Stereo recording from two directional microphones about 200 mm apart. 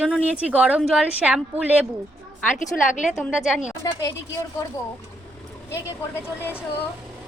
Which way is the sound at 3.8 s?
15° left (ahead or behind).